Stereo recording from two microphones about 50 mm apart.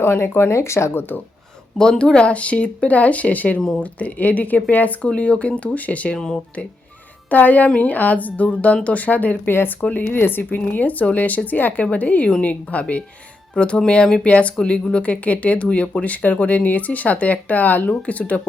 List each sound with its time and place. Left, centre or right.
0.0 s speech: left
0.9 s speech: left
1.8 s speech: centre
6.1 s speech: centre
7.3 s speech: left
9.5 s speech: left
9.8 s speech: left
10.7 s speech: left